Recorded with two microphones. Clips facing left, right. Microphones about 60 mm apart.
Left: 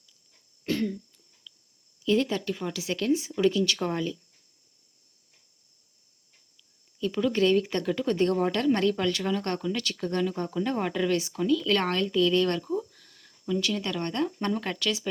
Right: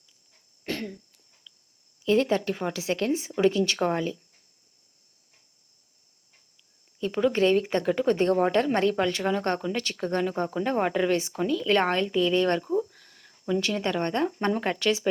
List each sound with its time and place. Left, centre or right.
0.8 s throat clearing: right
1.5 s a sound: right
2.0 s speech: right
7.0 s speech: right